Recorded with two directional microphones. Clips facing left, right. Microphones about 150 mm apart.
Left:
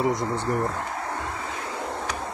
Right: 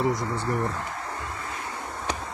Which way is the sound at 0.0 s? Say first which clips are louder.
Left 2 dB; 20° left (ahead or behind).